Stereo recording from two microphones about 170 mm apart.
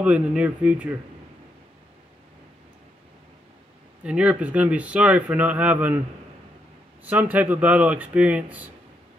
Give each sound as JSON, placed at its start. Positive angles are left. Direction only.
{"t": 0.0, "sound": "speech", "side_deg": -5}
{"t": 4.0, "sound": "speech", "side_deg": -5}
{"t": 7.1, "sound": "speech", "side_deg": -10}